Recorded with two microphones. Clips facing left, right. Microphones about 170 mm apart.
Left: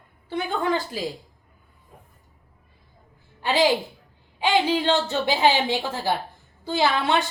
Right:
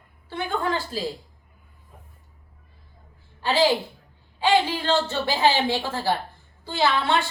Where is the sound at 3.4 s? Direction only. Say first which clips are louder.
Even; 15° left (ahead or behind).